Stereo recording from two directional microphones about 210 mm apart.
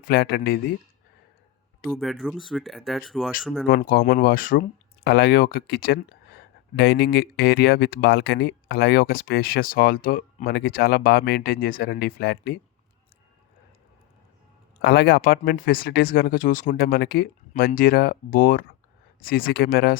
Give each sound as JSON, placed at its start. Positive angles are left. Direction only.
{"t": 0.1, "sound": "speech", "side_deg": 45}
{"t": 1.9, "sound": "speech", "side_deg": 0}
{"t": 3.7, "sound": "speech", "side_deg": 45}
{"t": 14.8, "sound": "speech", "side_deg": 50}